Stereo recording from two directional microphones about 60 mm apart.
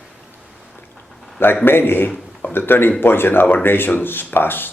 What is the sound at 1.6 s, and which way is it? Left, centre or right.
Speech, left.